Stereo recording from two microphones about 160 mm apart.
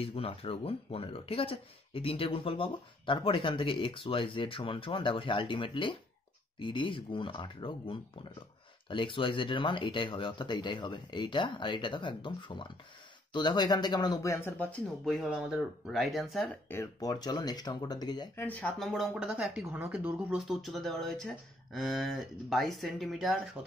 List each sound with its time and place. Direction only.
0.0 s speech: 35° left (ahead or behind); by 16.4 s centre (ahead or behind)
16.6 s speech: 15° left (ahead or behind)
18.3 s speech: 10° left (ahead or behind)